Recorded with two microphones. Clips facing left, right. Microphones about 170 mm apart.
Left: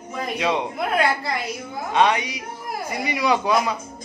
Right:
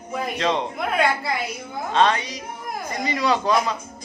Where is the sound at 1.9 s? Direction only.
15° left (ahead or behind).